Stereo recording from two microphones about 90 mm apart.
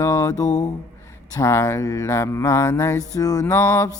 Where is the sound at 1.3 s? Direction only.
30° left (ahead or behind).